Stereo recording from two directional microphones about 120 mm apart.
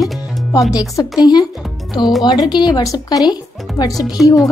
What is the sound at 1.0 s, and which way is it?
Speech, 35° left (ahead or behind).